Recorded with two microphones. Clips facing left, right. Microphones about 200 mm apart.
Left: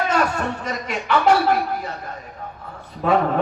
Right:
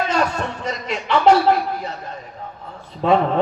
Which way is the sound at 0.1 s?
25° right (ahead or behind).